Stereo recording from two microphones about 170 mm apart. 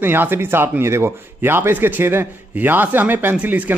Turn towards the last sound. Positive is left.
turn(degrees=-10)  # may be behind; listen again after turning